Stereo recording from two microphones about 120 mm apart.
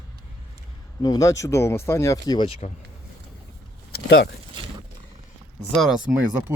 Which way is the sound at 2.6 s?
90° left.